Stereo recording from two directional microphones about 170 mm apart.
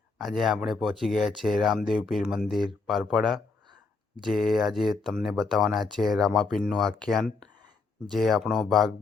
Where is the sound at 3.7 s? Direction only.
25° right (ahead or behind).